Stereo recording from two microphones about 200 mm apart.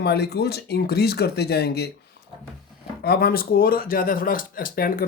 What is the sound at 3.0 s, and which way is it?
Speech, 50° left (ahead or behind).